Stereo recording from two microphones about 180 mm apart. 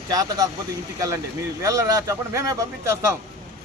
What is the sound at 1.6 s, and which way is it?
Speech, 15° right (ahead or behind).